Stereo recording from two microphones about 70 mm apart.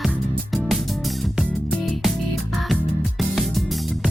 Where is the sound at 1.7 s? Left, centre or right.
Centre.